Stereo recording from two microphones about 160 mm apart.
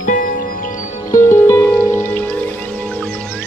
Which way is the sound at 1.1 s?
15° left (ahead or behind).